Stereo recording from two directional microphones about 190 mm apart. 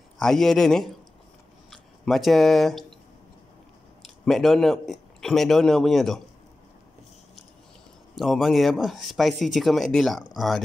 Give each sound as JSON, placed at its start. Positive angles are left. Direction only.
{"t": 0.2, "sound": "speech", "side_deg": 0}
{"t": 4.0, "sound": "speech", "side_deg": 0}
{"t": 8.2, "sound": "speech", "side_deg": 0}